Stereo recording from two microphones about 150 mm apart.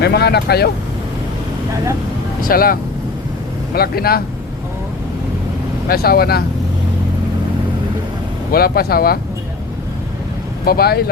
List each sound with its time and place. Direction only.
0.0 s speech: 90° left
2.4 s speech: 75° left (ahead or behind)
3.8 s speech: 90° left
5.9 s speech: 90° left
8.5 s speech: 90° left
10.7 s speech: 90° left